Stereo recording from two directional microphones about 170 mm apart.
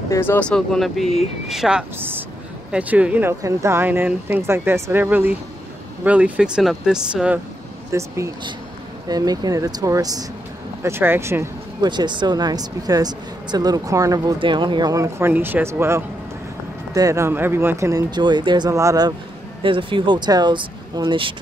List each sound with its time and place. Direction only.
0.1 s speech: 15° left (ahead or behind); by 7.3 s 5° right (ahead or behind)
7.9 s speech: 15° right (ahead or behind)
11.9 s speech: 25° right (ahead or behind)